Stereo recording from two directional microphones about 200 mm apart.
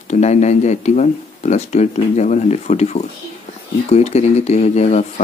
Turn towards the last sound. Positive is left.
turn(degrees=35)  # may be behind; listen again after turning